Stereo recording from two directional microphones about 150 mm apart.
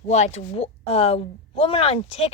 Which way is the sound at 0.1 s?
50° left (ahead or behind).